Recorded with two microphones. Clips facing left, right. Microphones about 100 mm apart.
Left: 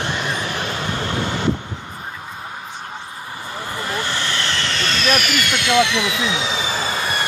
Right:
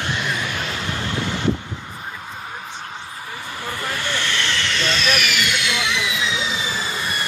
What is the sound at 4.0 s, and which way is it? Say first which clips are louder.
Vehicle: left 1 dB; 35° left (ahead or behind).